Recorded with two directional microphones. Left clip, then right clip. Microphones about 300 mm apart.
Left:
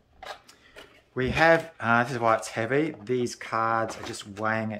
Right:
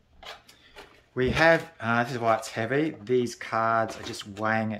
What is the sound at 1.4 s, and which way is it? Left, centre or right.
Speech, centre.